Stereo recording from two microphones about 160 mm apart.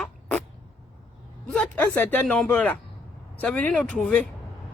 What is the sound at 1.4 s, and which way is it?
Speech, 5° left (ahead or behind).